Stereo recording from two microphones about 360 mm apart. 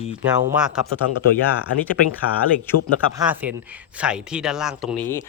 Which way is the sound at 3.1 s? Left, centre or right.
Centre.